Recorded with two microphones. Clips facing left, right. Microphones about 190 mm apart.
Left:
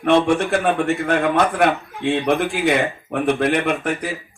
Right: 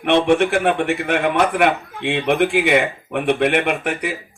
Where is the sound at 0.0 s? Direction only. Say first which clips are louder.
Right 1 dB; 65° right (ahead or behind).